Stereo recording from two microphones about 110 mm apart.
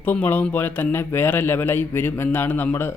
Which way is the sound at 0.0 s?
15° left (ahead or behind).